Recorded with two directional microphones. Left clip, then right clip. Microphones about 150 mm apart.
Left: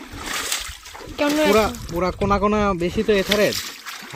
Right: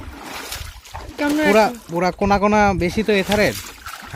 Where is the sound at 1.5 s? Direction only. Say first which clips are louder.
Right 3 dB; 70° right (ahead or behind).